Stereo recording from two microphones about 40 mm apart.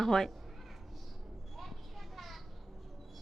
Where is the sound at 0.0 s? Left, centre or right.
Centre.